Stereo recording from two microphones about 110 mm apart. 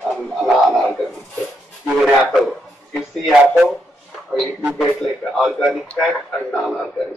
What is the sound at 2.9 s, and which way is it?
Speech, centre (ahead or behind).